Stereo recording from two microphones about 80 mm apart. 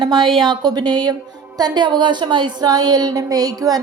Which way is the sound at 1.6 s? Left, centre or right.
Right.